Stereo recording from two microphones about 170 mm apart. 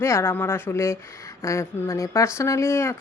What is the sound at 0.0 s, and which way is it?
Speech, 15° left (ahead or behind).